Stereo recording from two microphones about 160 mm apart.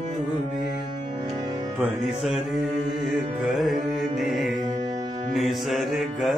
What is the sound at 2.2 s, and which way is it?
Music, centre (ahead or behind).